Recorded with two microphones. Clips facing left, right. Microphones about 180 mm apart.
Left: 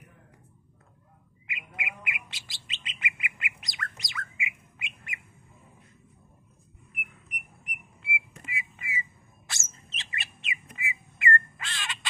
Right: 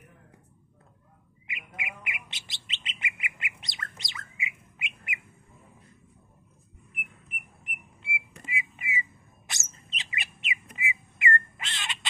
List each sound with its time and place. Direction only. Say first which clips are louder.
1.5 s bird: left 1 dB; 20° right (ahead or behind)
7.2 s whistle: even; 20° left (ahead or behind)
8.0 s a sound: left 2 dB; 25° right (ahead or behind)
9.5 s bird: right 1 dB; 15° right (ahead or behind)